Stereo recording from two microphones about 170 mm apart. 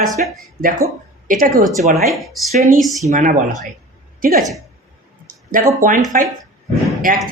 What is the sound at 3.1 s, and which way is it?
A woman's voice, 50° right (ahead or behind).